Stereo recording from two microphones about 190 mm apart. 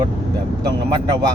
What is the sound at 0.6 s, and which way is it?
Speech, 20° right (ahead or behind).